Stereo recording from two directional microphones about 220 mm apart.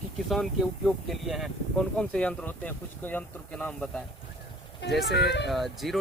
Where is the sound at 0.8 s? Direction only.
Centre (ahead or behind).